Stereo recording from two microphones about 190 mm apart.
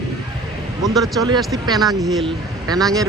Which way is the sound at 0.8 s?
Centre (ahead or behind).